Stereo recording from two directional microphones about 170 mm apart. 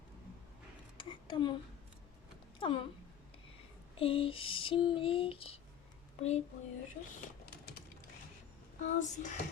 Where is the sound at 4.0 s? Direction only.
30° left (ahead or behind).